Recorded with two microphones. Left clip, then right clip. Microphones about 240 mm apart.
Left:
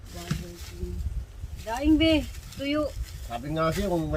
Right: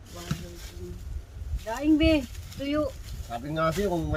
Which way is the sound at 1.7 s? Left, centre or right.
Centre.